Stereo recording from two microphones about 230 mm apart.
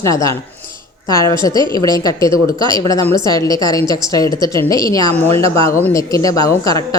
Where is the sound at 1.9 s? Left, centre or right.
Centre.